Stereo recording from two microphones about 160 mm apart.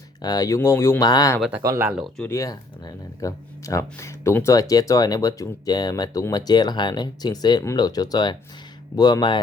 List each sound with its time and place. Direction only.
0.2 s speech: 25° left (ahead or behind)
1.4 s speech: 10° right (ahead or behind)
1.6 s speech: 20° right (ahead or behind)
1.9 s speech: 5° right (ahead or behind)
2.2 s speech: 20° left (ahead or behind)